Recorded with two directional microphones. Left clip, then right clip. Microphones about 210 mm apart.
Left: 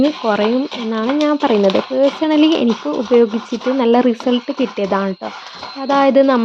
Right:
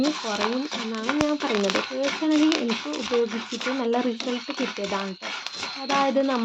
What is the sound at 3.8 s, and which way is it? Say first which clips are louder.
Speech: left 13 dB; 40° left (ahead or behind).